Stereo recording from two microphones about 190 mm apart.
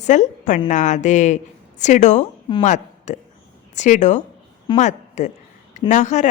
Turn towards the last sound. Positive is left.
turn(degrees=40)  # may be behind; listen again after turning